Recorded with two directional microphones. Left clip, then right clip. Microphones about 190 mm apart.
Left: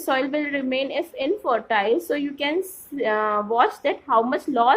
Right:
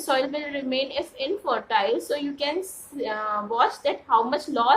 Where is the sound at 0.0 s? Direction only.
40° left (ahead or behind).